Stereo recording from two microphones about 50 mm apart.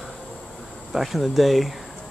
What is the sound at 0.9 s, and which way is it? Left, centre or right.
Speech, centre.